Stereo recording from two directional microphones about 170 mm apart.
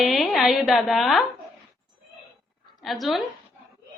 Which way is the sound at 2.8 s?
Centre (ahead or behind).